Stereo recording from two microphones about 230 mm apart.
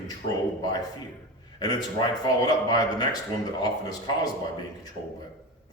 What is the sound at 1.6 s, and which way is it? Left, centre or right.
A man's voice, centre.